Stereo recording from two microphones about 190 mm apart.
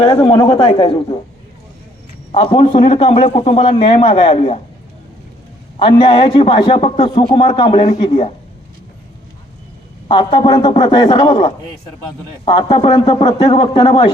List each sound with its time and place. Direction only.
0.0 s a man's voice: 25° left (ahead or behind)
2.3 s a man's voice: 30° left (ahead or behind)
5.8 s a man's voice: 25° left (ahead or behind)
10.1 s a man's voice: 25° left (ahead or behind)